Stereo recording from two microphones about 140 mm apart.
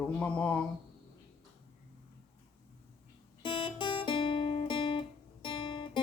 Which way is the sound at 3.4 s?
40° left (ahead or behind).